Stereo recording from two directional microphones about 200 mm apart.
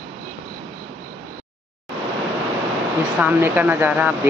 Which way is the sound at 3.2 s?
10° right (ahead or behind).